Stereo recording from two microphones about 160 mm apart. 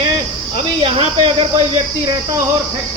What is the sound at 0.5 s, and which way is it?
Speech, 35° right (ahead or behind).